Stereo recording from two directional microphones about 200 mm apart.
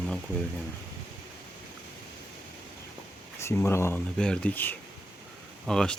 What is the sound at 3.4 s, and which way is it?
Speech, 15° left (ahead or behind).